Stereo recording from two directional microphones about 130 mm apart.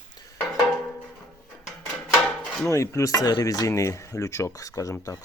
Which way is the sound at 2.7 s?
25° left (ahead or behind).